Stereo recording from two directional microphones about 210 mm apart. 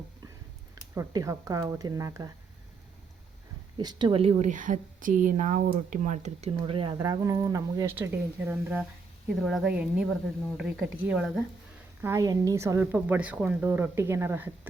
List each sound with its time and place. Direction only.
0.9 s a woman's voice: 15° right (ahead or behind)
3.8 s a woman's voice: 20° right (ahead or behind)
12.0 s a woman's voice: 15° right (ahead or behind)